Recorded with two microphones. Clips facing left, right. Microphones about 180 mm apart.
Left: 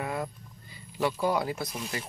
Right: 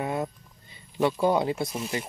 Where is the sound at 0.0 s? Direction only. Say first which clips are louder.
Right 4 dB; 25° right (ahead or behind).